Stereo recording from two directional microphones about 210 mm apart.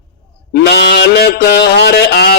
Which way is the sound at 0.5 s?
50° left (ahead or behind).